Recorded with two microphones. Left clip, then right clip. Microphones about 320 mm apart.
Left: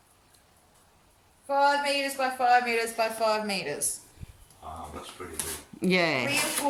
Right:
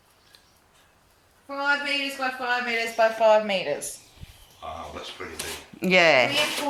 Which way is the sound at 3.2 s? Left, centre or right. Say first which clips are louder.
Right 9 dB; left.